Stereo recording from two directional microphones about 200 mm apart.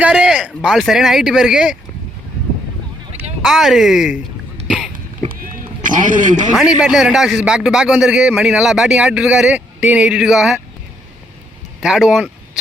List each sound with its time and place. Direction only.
0.0 s speech: 5° right (ahead or behind)
3.4 s a man's voice: centre (ahead or behind)
5.3 s run: 45° right (ahead or behind)
6.5 s a man's voice: 5° right (ahead or behind)
11.8 s a man's voice: 5° right (ahead or behind)